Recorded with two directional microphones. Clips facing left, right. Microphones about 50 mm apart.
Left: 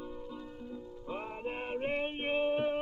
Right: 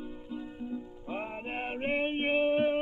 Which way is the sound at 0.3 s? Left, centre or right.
Right.